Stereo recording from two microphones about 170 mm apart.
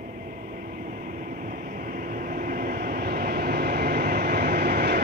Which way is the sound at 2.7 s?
65° right (ahead or behind).